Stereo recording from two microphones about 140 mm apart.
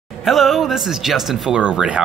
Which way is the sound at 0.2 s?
Centre (ahead or behind).